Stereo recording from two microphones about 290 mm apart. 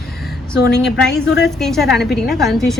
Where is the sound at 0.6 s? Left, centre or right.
Left.